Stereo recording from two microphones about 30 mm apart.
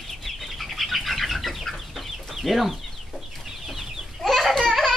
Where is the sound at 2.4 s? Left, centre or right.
Centre.